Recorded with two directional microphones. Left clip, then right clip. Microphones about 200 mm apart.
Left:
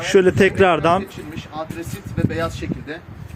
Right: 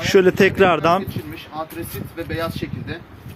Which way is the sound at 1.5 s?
30° left (ahead or behind).